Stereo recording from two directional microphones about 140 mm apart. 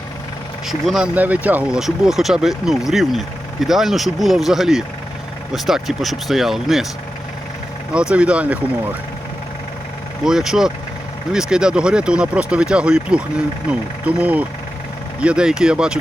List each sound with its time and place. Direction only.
0.7 s speech: 5° right (ahead or behind)
8.1 s speech: 10° right (ahead or behind)
10.2 s speech: 5° right (ahead or behind)